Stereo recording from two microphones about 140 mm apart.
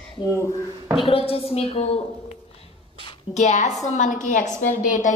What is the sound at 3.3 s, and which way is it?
A woman's voice, 55° left (ahead or behind).